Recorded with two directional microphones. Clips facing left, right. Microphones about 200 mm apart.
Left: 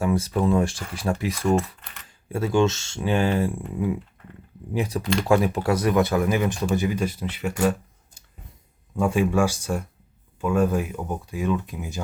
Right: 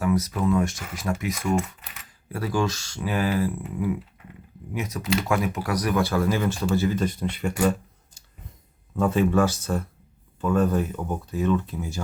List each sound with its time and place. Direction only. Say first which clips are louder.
0.0 s speech: left 1 dB; 30° left (ahead or behind)
1.5 s keys jangling: left 2 dB; 5° right (ahead or behind)
2.0 s speech: left 4 dB; 25° left (ahead or behind)
4.7 s speech: left 2 dB; 30° left (ahead or behind); by 7.5 s 5° left (ahead or behind)
9.0 s speech: even; 10° left (ahead or behind)